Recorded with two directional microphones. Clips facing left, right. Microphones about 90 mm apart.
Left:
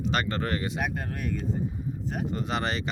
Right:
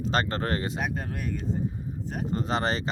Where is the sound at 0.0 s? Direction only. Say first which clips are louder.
Right 1 dB; 35° right (ahead or behind).